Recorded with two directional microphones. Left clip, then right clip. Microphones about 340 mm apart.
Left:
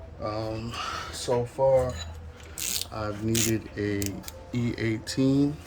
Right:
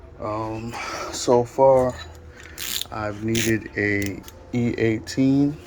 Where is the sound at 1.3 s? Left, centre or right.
Right.